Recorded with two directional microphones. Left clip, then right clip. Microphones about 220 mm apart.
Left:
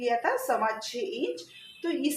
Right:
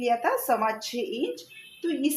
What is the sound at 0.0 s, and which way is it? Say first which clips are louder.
Speech: right 2 dB; 35° right (ahead or behind).